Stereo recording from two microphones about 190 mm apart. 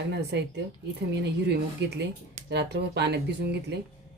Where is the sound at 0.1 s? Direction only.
60° right (ahead or behind).